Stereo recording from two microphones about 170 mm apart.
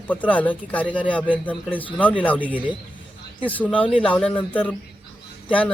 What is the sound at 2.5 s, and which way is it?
Speech, 10° right (ahead or behind).